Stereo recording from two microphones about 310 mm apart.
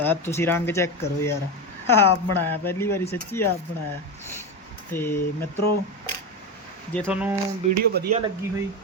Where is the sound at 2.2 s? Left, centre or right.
Left.